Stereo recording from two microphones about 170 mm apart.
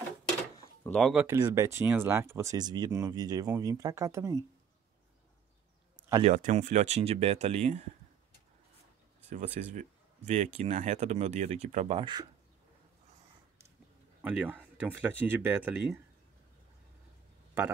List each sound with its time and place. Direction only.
0.8 s speech: 5° left (ahead or behind)
1.2 s speech: 15° right (ahead or behind)
6.2 s speech: 45° right (ahead or behind)
9.3 s speech: 45° right (ahead or behind); by 12.3 s 25° right (ahead or behind)
14.2 s speech: 5° right (ahead or behind)